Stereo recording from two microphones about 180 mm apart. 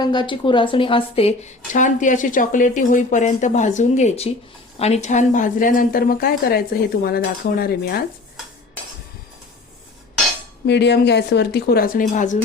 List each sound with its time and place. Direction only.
0.0 s a woman's voice: 25° left (ahead or behind); by 8.0 s 60° left (ahead or behind)
10.7 s speech: 70° left (ahead or behind); by 12.4 s 45° left (ahead or behind)